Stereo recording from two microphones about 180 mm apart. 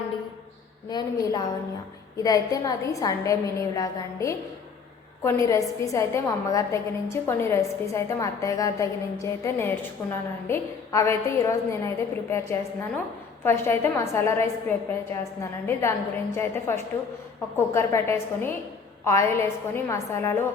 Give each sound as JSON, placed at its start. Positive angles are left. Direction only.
{"t": 0.9, "sound": "a woman's voice", "side_deg": 25}